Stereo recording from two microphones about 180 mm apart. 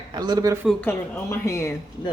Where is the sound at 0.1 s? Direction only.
25° right (ahead or behind).